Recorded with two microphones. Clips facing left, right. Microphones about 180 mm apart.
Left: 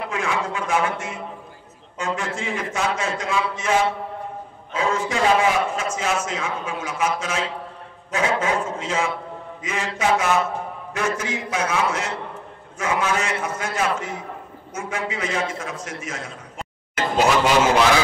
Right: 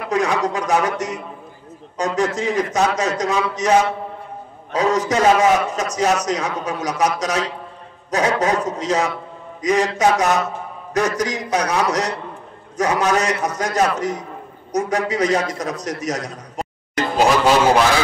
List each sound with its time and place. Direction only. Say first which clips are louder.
0.1 s a man's voice: right 9 dB; 40° right (ahead or behind)